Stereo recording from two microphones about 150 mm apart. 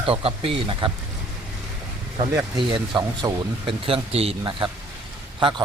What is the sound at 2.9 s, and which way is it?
Speech, 30° right (ahead or behind).